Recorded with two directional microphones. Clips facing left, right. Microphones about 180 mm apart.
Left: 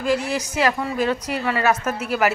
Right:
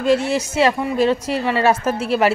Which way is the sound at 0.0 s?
25° right (ahead or behind).